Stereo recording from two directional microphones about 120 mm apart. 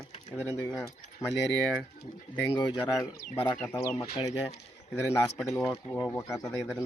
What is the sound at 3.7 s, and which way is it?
Speech, 30° left (ahead or behind).